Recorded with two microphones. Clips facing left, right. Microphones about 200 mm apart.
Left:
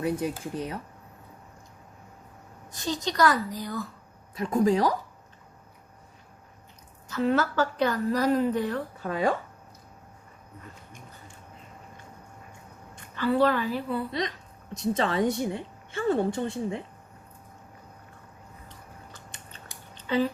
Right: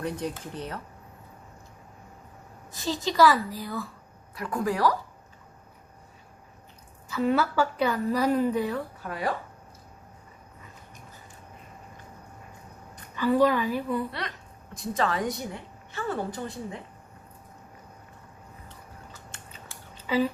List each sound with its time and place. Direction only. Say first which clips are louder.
0.0 s speech: left 3 dB; 10° left (ahead or behind)
2.7 s a woman's voice: right 3 dB; 5° right (ahead or behind)
4.4 s a woman's voice: left 5 dB; 25° left (ahead or behind)
7.2 s a woman's voice: even; 5° right (ahead or behind)
13.1 s a woman's voice: right 1 dB; 15° right (ahead or behind)
14.1 s a woman's voice: left 5 dB; 20° left (ahead or behind)
20.0 s a sound: even; 5° right (ahead or behind)